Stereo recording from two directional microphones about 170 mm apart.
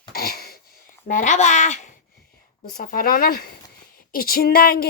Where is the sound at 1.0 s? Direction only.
50° left (ahead or behind).